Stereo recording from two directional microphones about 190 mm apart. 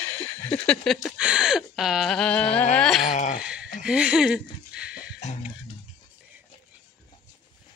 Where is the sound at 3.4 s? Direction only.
5° right (ahead or behind).